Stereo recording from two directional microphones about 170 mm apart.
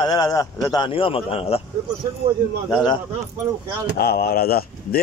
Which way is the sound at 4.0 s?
65° left (ahead or behind).